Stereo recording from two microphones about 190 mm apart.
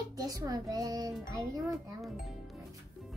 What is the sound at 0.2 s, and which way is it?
A child's voice, 20° right (ahead or behind).